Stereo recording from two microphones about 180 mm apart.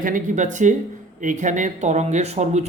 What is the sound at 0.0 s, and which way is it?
Speech, 45° right (ahead or behind).